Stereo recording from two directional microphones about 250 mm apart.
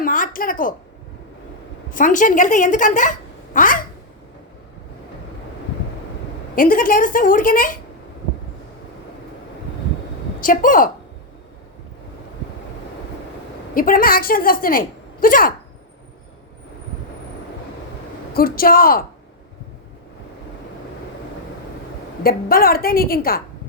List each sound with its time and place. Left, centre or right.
0.0 s a woman's voice: left
1.9 s a woman's voice: left
6.6 s a woman's voice: left
10.4 s a woman's voice: left
13.7 s a woman's voice: left
18.3 s a woman's voice: left
22.2 s a woman's voice: left